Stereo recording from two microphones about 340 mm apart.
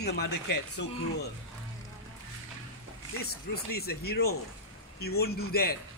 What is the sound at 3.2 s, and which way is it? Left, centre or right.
Speech, left.